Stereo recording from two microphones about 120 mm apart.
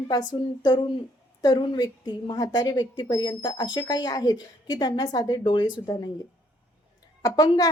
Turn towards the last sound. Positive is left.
turn(degrees=30)  # may be behind; listen again after turning